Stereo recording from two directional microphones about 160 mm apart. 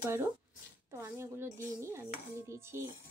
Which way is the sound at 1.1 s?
15° right (ahead or behind).